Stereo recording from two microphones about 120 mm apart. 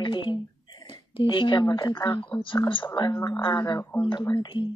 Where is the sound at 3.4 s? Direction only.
35° left (ahead or behind).